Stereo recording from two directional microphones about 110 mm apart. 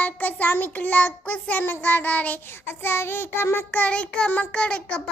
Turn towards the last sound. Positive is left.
turn(degrees=10)  # may be behind; listen again after turning